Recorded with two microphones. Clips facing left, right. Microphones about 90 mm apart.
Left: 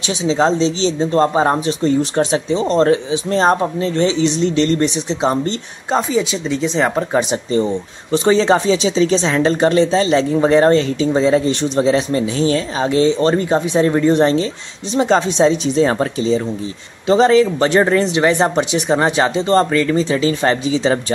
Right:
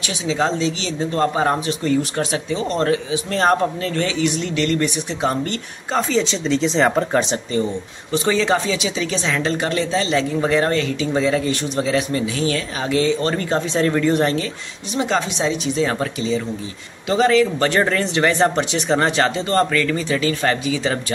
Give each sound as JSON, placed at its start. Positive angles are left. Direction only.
{"t": 0.2, "sound": "speech", "side_deg": 30}
{"t": 5.9, "sound": "speech", "side_deg": 10}
{"t": 8.1, "sound": "speech", "side_deg": 30}